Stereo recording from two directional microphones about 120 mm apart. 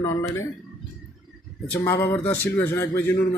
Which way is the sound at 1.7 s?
25° left (ahead or behind).